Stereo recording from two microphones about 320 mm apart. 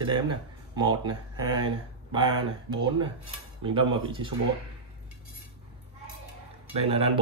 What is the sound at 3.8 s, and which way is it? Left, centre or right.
Speech, centre.